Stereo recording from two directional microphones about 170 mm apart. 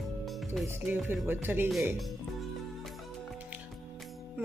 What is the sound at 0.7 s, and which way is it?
A woman's voice, 15° right (ahead or behind).